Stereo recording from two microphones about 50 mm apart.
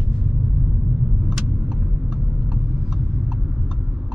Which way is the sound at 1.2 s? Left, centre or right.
Centre.